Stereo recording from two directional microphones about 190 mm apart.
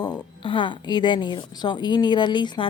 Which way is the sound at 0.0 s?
25° left (ahead or behind).